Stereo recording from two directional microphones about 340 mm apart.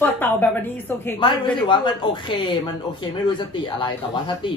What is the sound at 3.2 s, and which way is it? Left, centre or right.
Speech, centre.